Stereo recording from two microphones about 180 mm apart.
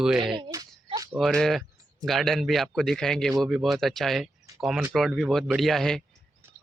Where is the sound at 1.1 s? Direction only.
Centre (ahead or behind).